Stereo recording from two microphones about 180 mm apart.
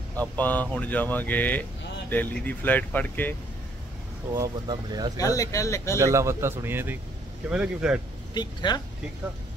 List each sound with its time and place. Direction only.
0.1 s speech: 10° left (ahead or behind)
4.3 s speech: 20° right (ahead or behind)
5.1 s speech: 20° left (ahead or behind)
5.9 s a man's voice: 15° right (ahead or behind)
8.4 s speech: 25° left (ahead or behind)